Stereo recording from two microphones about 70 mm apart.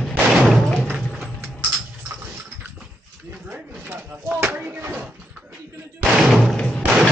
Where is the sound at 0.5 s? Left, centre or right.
Centre.